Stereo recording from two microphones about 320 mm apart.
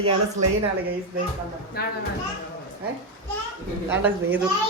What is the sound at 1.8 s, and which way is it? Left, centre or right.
Speech, left.